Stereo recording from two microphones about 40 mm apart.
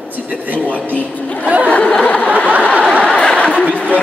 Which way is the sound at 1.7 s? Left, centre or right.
Left.